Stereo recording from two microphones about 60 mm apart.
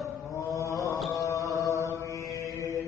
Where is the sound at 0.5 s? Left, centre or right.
Left.